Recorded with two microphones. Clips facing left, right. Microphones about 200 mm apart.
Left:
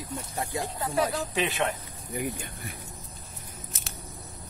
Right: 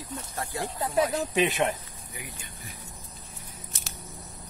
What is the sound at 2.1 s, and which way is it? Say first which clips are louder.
Speech: left 12 dB; 55° left (ahead or behind).